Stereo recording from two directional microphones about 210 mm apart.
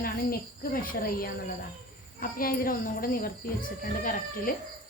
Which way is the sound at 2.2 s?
45° left (ahead or behind).